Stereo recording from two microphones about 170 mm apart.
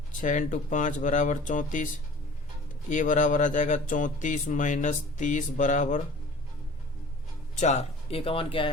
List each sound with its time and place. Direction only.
0.1 s speech: 50° left (ahead or behind)
2.9 s speech: 50° left (ahead or behind)
7.6 s speech: 40° left (ahead or behind)